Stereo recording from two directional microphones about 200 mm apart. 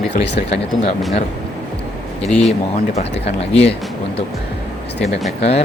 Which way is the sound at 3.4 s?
30° left (ahead or behind).